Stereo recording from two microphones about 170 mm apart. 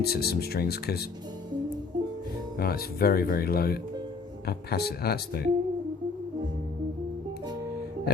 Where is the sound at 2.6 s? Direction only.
60° left (ahead or behind).